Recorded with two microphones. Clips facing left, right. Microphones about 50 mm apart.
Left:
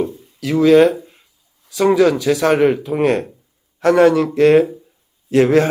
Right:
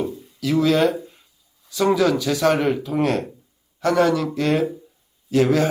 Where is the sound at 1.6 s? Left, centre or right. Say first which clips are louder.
Left 5 dB; centre.